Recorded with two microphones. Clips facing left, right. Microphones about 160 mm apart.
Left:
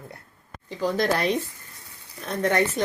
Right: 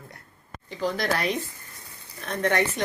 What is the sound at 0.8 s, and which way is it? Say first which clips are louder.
Speech: left 3 dB; 20° left (ahead or behind).